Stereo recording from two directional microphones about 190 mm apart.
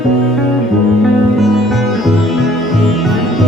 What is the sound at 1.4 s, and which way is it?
Music, centre (ahead or behind).